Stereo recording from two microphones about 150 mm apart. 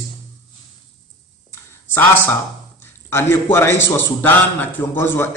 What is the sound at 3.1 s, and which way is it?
A man's voice, 15° left (ahead or behind).